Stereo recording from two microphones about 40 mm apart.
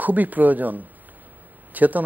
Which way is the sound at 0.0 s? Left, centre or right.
Right.